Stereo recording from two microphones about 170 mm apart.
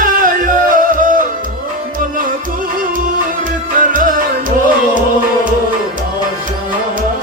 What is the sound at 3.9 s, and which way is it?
Music, 50° right (ahead or behind).